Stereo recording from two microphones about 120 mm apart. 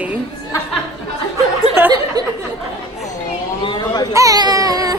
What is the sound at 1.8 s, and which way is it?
Speech, 20° right (ahead or behind).